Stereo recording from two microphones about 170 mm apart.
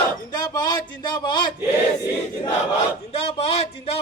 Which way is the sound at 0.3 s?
25° left (ahead or behind).